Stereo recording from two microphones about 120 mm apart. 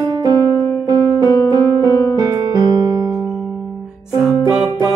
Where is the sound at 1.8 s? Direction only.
30° right (ahead or behind).